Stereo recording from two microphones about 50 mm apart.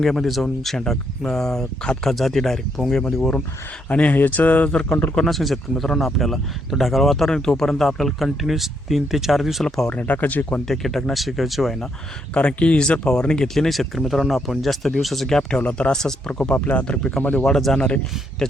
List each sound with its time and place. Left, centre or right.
0.0 s speech: centre
3.8 s speech: left
4.7 s speech: centre
5.1 s speech: centre
9.6 s speech: centre
9.9 s speech: left
10.7 s speech: centre
12.3 s speech: left
13.5 s speech: centre
16.6 s speech: left
16.8 s speech: centre
17.7 s speech: left